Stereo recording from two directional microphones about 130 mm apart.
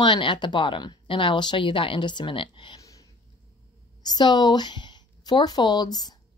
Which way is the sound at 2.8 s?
25° left (ahead or behind).